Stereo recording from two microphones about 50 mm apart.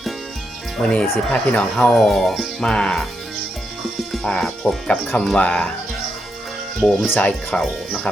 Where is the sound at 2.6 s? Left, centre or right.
Centre.